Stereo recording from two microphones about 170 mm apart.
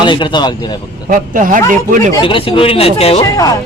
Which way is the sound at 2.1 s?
30° left (ahead or behind).